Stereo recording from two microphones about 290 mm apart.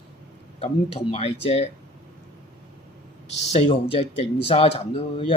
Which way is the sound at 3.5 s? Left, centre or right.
Centre.